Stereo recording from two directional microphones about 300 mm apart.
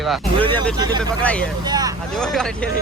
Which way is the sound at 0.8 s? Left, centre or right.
Centre.